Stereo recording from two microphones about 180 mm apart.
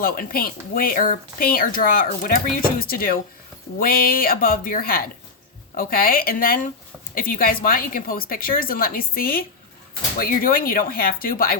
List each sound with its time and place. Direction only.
0.0 s speech: 55° left (ahead or behind)